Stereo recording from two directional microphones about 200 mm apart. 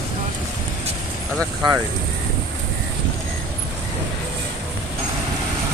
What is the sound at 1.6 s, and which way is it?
Speech, 25° right (ahead or behind).